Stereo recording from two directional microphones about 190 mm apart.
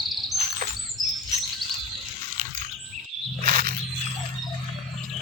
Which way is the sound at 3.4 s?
50° right (ahead or behind).